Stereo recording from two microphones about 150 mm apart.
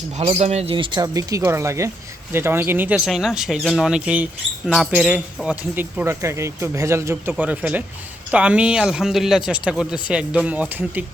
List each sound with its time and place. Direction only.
0.2 s speech: 45° right (ahead or behind); by 11.0 s 10° right (ahead or behind)